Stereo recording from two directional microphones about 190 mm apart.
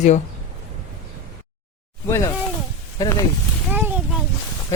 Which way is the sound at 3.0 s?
20° left (ahead or behind).